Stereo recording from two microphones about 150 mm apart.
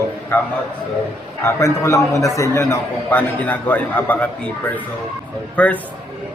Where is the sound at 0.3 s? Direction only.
10° left (ahead or behind).